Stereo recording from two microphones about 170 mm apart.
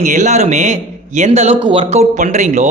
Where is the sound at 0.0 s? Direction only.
45° right (ahead or behind).